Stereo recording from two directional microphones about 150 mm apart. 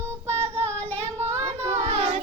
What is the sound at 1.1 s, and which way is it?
Child singing, 45° right (ahead or behind).